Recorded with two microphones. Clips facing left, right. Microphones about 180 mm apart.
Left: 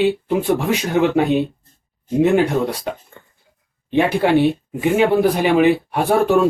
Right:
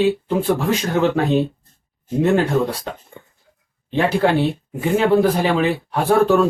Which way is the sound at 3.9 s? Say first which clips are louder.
Left 2 dB; 15° left (ahead or behind).